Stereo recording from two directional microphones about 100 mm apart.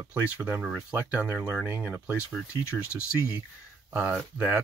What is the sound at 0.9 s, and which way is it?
Speech, 15° right (ahead or behind).